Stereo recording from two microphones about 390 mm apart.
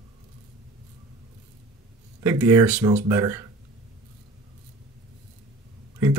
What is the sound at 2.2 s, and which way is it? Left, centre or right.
Speech, centre.